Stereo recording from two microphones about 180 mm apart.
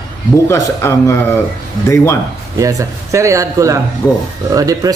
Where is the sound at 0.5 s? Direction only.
15° left (ahead or behind).